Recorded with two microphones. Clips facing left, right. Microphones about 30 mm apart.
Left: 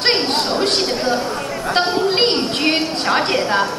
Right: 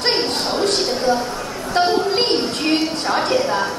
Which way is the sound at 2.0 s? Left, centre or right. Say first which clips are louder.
Left 2 dB; left.